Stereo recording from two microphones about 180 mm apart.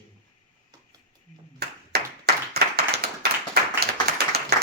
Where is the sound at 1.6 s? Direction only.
65° right (ahead or behind).